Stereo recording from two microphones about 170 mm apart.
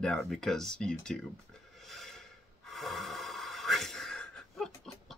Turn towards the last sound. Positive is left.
turn(degrees=5)  # may be behind; listen again after turning